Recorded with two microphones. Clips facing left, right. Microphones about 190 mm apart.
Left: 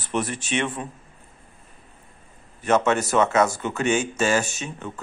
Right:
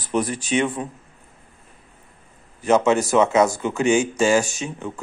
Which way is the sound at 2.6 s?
10° right (ahead or behind).